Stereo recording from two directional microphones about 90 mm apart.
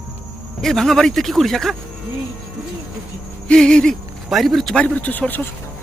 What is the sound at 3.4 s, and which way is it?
A man's voice, 10° left (ahead or behind).